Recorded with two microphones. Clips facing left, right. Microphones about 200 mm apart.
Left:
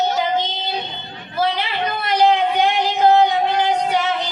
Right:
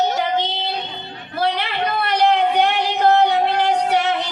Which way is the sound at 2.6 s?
65° right (ahead or behind).